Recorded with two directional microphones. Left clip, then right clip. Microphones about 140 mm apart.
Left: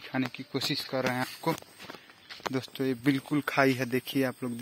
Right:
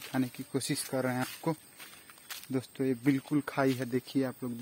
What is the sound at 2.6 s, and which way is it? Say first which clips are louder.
Speech: even; 10° right (ahead or behind).